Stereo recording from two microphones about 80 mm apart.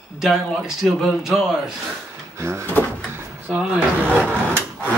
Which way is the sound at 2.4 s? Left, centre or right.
Right.